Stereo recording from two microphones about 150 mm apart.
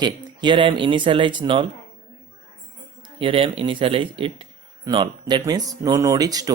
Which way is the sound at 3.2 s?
35° right (ahead or behind).